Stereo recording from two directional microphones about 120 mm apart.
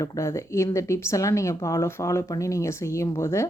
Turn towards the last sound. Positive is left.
turn(degrees=25)  # may be behind; listen again after turning